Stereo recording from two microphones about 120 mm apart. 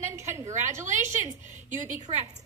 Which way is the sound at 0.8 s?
90° right.